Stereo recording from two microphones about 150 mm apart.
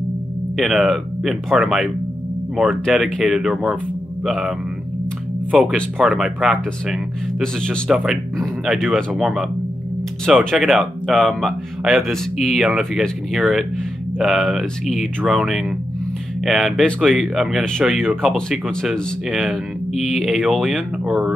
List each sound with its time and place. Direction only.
0.6 s speech: centre (ahead or behind)